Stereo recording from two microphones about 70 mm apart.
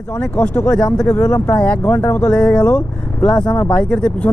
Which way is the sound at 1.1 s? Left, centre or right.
Left.